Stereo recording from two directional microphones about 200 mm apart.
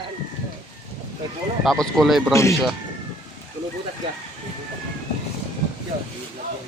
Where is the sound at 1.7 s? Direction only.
Centre (ahead or behind).